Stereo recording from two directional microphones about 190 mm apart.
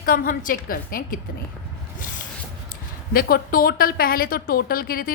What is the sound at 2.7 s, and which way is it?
A woman's voice, 50° left (ahead or behind).